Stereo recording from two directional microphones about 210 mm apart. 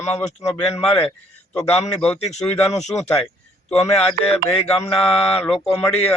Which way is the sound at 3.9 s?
5° left (ahead or behind).